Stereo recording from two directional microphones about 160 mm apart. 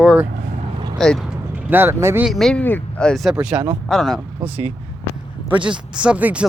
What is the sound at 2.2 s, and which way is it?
Speech, centre (ahead or behind).